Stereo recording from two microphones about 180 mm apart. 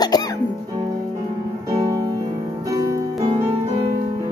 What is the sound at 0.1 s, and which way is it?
Music, 20° left (ahead or behind).